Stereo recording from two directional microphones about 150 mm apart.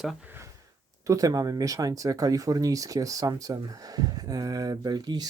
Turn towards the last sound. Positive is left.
turn(degrees=-25)  # may be behind; listen again after turning